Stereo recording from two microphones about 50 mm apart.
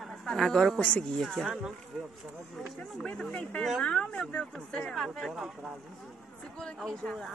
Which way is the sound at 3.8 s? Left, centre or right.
Left.